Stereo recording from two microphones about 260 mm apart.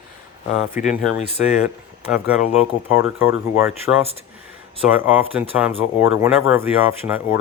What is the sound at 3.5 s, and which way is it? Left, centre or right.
Speech, centre.